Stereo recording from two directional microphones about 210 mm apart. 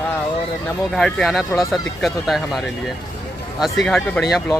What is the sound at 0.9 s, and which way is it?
Speech, 5° left (ahead or behind).